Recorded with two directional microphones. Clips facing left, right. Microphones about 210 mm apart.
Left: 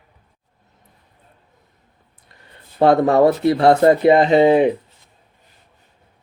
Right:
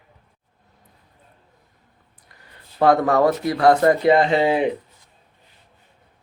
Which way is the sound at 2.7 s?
25° left (ahead or behind).